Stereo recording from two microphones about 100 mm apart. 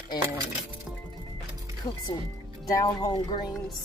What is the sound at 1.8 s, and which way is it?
A woman's voice, 45° left (ahead or behind).